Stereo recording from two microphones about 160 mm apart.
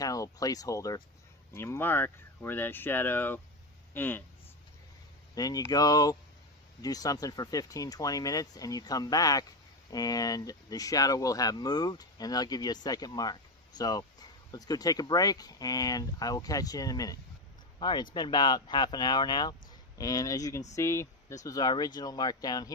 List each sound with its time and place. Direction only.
0.0 s speech: 20° left (ahead or behind)
5.3 s speech: 25° left (ahead or behind)